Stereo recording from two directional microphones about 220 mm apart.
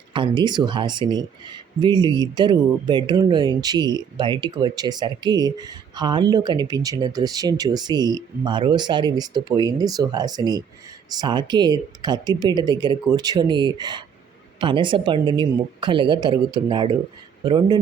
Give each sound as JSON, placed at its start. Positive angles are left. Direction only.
{"t": 0.1, "sound": "speech", "side_deg": -20}